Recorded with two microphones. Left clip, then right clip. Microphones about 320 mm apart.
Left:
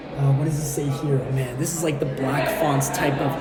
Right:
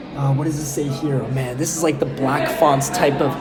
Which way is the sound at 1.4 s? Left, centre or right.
Right.